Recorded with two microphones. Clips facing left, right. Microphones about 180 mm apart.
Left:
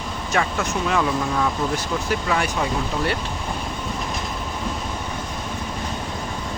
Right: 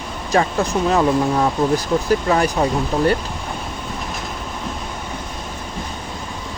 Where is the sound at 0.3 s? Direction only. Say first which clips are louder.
Right 6 dB; 35° right (ahead or behind).